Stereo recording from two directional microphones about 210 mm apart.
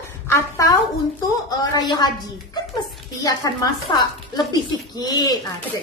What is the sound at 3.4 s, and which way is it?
A woman's voice, 15° left (ahead or behind).